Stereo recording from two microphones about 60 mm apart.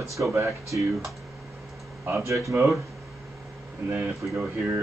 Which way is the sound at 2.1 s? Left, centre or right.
Right.